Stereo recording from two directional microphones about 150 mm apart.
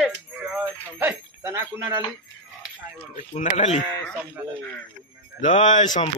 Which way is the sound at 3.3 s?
50° left (ahead or behind).